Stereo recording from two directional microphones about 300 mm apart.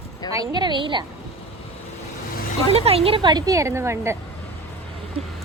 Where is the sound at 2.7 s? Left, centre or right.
Centre.